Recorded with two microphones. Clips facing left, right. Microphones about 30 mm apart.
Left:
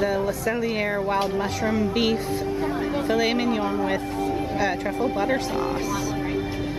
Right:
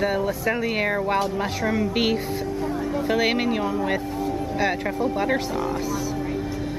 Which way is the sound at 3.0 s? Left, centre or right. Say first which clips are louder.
Right 1 dB; centre.